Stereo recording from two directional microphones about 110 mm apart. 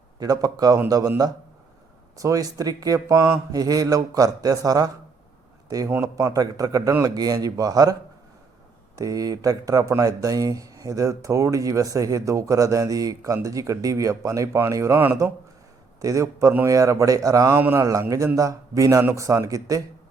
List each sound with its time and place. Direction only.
0.2 s speech: 35° right (ahead or behind)
2.1 s speech: 30° right (ahead or behind)
9.0 s speech: 30° right (ahead or behind)
17.5 s speech: 20° right (ahead or behind)
18.3 s speech: 30° right (ahead or behind)